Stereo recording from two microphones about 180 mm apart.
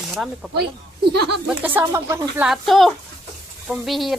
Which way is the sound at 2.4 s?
Centre (ahead or behind).